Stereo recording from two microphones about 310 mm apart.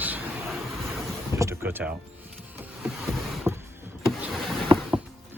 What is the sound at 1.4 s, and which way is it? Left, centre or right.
Speech, centre.